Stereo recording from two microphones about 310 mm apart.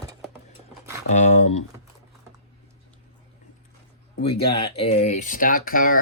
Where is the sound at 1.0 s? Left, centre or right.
Left.